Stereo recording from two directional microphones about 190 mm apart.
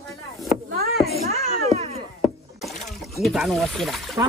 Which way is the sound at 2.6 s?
Centre (ahead or behind).